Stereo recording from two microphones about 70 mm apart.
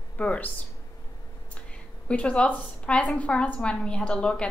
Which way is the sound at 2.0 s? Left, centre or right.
Centre.